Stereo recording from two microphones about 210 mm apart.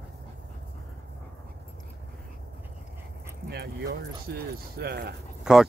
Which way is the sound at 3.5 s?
50° right (ahead or behind).